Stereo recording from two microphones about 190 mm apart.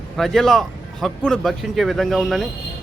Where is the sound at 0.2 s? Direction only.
Centre (ahead or behind).